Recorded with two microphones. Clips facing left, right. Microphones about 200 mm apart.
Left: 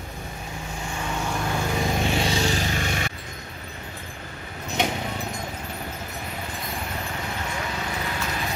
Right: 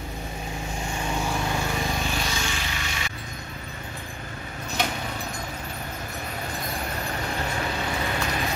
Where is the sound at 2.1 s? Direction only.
30° left (ahead or behind); by 3.1 s 50° left (ahead or behind).